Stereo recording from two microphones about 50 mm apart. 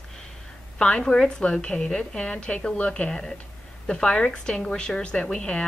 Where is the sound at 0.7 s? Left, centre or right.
Centre.